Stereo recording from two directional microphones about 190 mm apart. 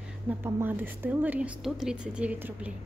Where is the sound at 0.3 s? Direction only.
10° right (ahead or behind).